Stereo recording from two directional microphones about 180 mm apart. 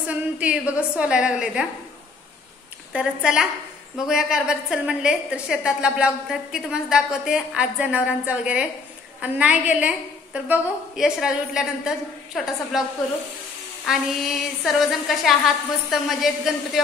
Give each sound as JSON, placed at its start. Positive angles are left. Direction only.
{"t": 0.0, "sound": "a woman's voice", "side_deg": -5}
{"t": 2.9, "sound": "a woman's voice", "side_deg": -5}
{"t": 13.8, "sound": "a woman's voice", "side_deg": 0}